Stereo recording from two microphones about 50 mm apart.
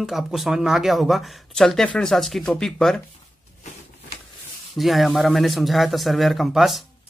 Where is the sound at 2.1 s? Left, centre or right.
Centre.